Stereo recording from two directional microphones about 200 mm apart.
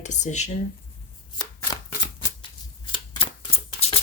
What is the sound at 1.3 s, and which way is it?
Shuffling cards, 20° left (ahead or behind).